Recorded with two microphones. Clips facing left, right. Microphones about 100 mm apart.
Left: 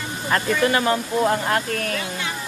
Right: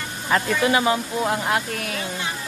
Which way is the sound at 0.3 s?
5° right (ahead or behind).